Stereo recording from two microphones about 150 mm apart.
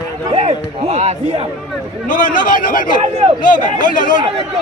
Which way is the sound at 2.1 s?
65° left (ahead or behind).